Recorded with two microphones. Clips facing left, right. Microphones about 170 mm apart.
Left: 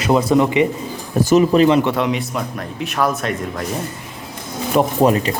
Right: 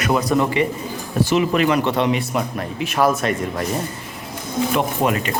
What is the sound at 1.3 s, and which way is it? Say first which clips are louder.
Speech: left 6 dB; 30° left (ahead or behind).